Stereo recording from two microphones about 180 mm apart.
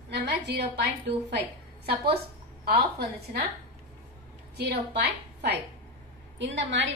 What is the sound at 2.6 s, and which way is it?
Speech, 60° right (ahead or behind).